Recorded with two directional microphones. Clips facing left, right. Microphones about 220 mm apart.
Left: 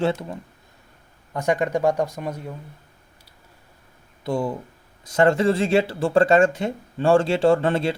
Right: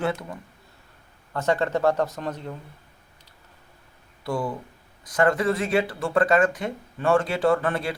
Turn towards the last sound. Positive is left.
turn(degrees=25)  # may be behind; listen again after turning